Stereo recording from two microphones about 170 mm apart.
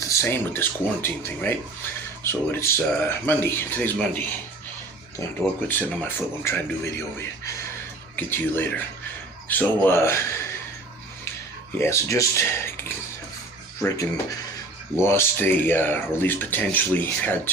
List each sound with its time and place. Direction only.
0.1 s speech: 15° left (ahead or behind)
5.6 s speech: 10° left (ahead or behind)
11.8 s speech: 15° left (ahead or behind)
13.8 s speech: 20° left (ahead or behind)